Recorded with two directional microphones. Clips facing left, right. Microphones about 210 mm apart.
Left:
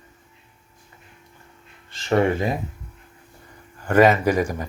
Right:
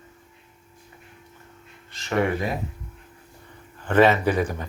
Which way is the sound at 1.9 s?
30° left (ahead or behind).